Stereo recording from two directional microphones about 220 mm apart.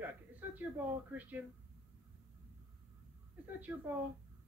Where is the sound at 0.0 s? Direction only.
10° right (ahead or behind).